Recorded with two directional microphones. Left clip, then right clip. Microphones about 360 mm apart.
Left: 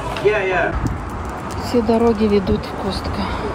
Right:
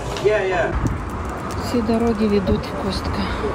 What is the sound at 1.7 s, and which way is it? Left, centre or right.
Speech, centre.